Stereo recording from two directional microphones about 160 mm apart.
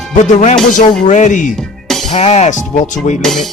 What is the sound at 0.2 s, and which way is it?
Speech, 45° left (ahead or behind).